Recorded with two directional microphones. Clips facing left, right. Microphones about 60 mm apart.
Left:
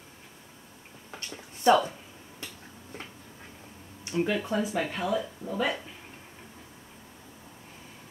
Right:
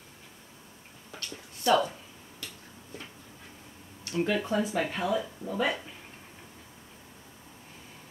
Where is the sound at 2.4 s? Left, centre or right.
Left.